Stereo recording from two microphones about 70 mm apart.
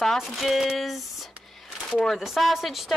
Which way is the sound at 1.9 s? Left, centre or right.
Centre.